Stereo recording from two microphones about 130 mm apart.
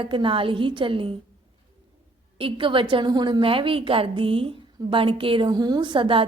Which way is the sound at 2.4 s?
40° right (ahead or behind).